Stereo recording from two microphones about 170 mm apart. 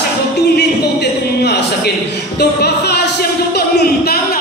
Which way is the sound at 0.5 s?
75° left (ahead or behind).